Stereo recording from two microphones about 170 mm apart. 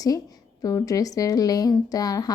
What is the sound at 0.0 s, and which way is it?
A woman's voice, 20° left (ahead or behind).